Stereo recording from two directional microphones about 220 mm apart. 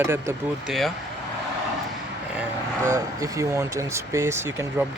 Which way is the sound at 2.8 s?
15° right (ahead or behind).